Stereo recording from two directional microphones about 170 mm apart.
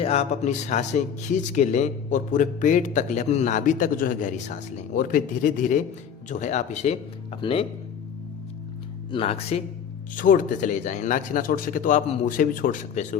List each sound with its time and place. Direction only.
0.0 s speech: 40° left (ahead or behind)
9.1 s speech: 35° left (ahead or behind)
10.2 s speech: 50° left (ahead or behind)